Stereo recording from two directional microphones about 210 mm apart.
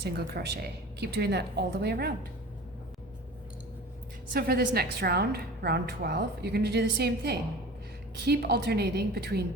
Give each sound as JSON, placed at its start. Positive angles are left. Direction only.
{"t": 0.0, "sound": "a woman's voice", "side_deg": -50}
{"t": 4.4, "sound": "a woman's voice", "side_deg": -50}